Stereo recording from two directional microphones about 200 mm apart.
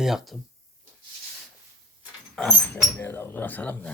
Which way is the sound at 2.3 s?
5° left (ahead or behind).